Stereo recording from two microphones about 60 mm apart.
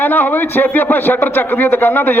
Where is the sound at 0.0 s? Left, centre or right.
Left.